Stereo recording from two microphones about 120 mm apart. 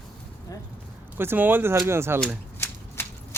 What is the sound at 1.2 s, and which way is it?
Speech, 15° right (ahead or behind).